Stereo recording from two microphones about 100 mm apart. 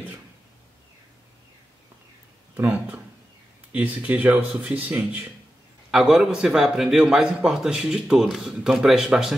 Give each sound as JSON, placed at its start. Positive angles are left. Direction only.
{"t": 2.5, "sound": "a man's voice", "side_deg": -15}